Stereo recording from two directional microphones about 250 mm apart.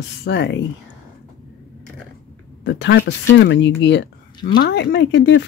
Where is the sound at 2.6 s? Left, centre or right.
Left.